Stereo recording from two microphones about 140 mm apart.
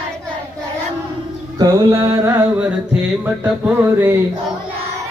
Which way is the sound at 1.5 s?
25° right (ahead or behind).